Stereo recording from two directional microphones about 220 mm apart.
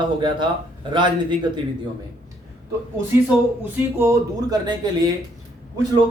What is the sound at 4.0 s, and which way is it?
Speech, 15° right (ahead or behind).